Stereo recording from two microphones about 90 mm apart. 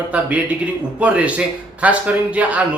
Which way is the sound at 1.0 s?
15° right (ahead or behind).